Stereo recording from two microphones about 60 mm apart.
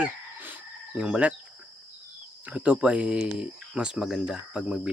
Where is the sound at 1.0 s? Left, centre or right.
Centre.